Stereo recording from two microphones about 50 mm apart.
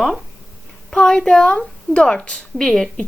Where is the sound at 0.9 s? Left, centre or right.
Centre.